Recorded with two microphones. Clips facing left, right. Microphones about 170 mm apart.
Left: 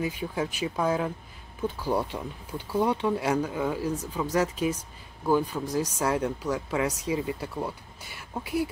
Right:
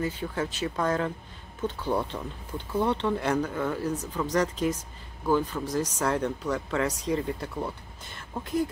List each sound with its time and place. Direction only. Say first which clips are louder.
0.0 s speech: even; 10° left (ahead or behind)